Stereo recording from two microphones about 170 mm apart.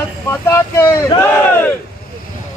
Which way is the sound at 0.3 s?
15° left (ahead or behind).